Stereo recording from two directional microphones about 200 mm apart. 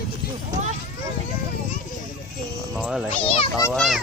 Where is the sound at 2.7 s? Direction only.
5° right (ahead or behind).